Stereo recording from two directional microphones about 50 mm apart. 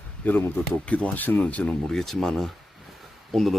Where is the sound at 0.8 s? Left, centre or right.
Left.